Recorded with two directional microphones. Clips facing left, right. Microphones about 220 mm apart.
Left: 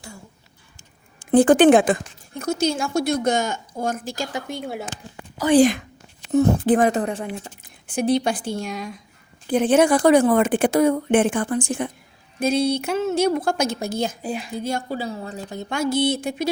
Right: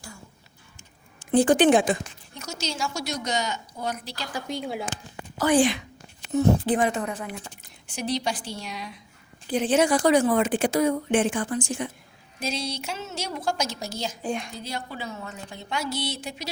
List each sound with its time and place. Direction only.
1.2 s a woman's voice: 55° left (ahead or behind)
5.5 s speech: 40° left (ahead or behind)
7.6 s speech: 55° left (ahead or behind)
14.2 s a woman's voice: 5° left (ahead or behind)
14.5 s a woman's voice: 50° left (ahead or behind)